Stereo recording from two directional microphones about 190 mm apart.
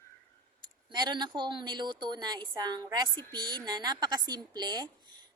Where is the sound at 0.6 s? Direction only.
25° right (ahead or behind).